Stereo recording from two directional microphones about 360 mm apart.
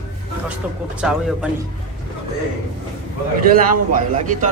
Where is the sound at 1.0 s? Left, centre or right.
Centre.